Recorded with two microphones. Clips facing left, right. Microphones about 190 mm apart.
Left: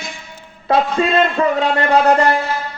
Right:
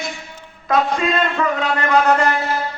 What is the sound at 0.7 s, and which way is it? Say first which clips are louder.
A man's voice: left 3 dB; 30° left (ahead or behind).